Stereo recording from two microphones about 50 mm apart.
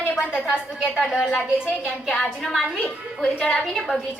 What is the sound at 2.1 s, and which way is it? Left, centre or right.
Speech, centre.